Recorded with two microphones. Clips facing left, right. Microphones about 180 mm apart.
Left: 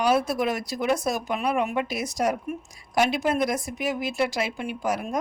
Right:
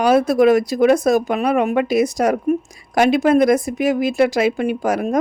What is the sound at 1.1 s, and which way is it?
Speech, 90° right.